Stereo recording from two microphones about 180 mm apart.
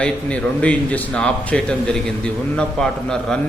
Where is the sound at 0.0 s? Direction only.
5° left (ahead or behind).